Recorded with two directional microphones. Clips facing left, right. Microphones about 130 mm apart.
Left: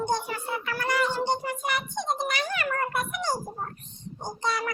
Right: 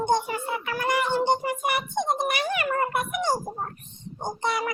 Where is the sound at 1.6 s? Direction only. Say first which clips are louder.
Right 4 dB; 55° right (ahead or behind).